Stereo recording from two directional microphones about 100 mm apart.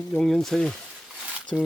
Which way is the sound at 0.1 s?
5° left (ahead or behind).